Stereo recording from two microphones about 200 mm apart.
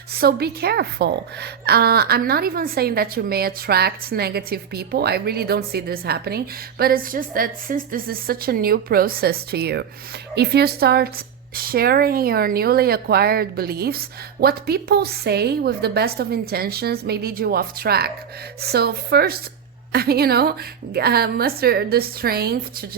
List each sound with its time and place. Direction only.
0.1 s a woman's voice: 50° right (ahead or behind)